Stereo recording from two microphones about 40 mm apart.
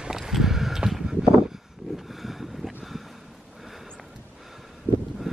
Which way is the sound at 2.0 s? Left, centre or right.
Centre.